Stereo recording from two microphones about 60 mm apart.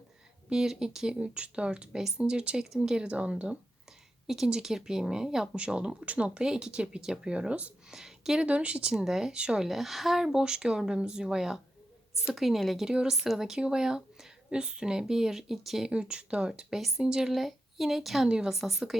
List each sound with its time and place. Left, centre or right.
0.5 s speech: centre
5.5 s speech: centre
7.9 s speech: centre
9.6 s speech: centre
15.9 s a woman's voice: centre